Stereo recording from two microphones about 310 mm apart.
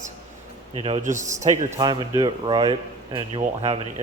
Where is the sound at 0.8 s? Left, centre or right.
Right.